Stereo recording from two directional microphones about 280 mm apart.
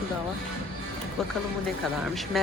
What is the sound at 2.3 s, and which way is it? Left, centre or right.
Speech, centre.